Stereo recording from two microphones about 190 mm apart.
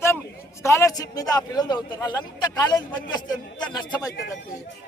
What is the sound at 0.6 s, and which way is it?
A man's voice, 15° left (ahead or behind).